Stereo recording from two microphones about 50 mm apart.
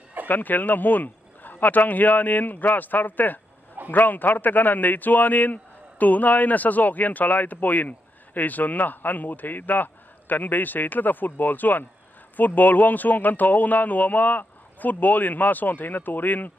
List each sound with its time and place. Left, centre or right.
0.3 s speech: left